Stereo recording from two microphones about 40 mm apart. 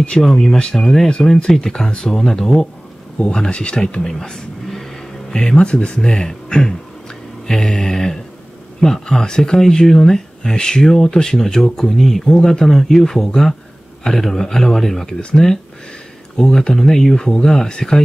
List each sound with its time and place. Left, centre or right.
0.2 s speech: centre
3.2 s speech: left
4.1 s vehicle: centre
5.3 s speech: centre
5.9 s speech: centre
16.3 s speech: centre